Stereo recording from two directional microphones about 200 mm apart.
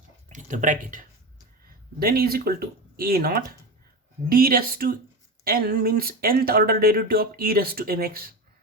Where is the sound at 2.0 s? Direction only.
50° right (ahead or behind).